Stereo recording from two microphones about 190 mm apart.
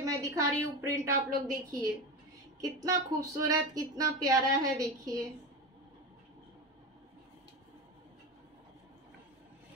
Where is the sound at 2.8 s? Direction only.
20° right (ahead or behind).